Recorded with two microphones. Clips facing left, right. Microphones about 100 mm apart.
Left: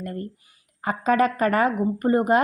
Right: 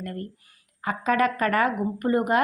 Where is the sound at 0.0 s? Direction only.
25° left (ahead or behind).